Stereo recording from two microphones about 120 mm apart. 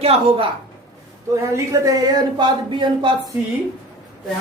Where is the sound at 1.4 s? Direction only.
25° right (ahead or behind).